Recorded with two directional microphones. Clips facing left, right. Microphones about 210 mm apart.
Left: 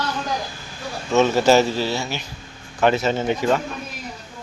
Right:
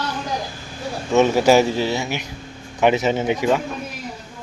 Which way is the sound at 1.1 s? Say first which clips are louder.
Right 1 dB; 15° right (ahead or behind).